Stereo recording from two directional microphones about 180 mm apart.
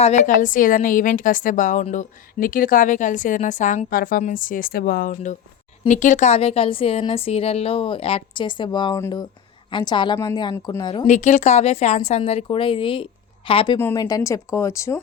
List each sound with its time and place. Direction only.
0.2 s a woman's voice: 45° left (ahead or behind); by 10.8 s 15° left (ahead or behind)
11.0 s a woman's voice: 40° left (ahead or behind)
13.7 s a woman's voice: 15° left (ahead or behind)